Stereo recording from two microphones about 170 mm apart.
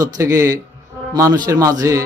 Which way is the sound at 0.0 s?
20° right (ahead or behind).